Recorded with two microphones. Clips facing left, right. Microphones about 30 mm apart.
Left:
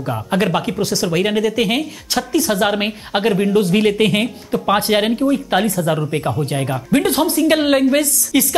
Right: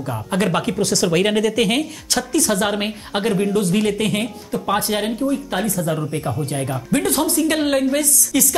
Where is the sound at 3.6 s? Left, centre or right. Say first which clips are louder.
Left 4 dB; left.